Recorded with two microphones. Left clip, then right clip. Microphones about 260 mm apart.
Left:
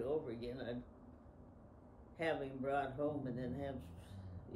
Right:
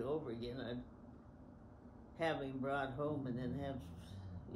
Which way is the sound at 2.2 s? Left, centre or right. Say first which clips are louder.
Even; centre.